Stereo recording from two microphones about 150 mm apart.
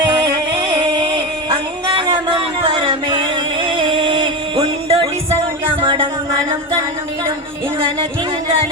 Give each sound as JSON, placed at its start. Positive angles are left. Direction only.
{"t": 0.8, "sound": "music", "side_deg": -25}